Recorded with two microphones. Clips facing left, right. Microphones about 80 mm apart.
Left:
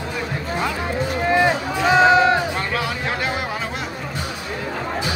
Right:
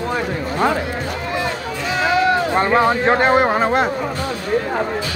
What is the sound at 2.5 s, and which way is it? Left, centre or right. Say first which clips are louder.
Speech: right 9 dB; right.